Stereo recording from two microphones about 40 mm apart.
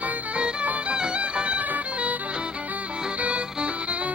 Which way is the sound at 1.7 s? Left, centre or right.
Right.